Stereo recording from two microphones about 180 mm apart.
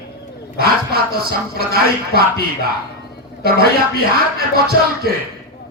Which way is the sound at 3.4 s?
60° right (ahead or behind).